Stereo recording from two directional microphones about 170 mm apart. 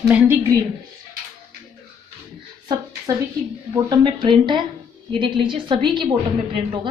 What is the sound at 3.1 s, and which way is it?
A woman's voice, 20° right (ahead or behind).